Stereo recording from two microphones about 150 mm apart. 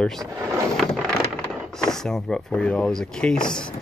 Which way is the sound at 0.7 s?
5° left (ahead or behind).